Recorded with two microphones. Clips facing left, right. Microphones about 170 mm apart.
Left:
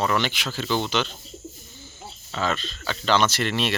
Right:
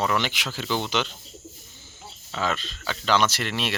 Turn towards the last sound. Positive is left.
turn(degrees=-5)  # may be behind; listen again after turning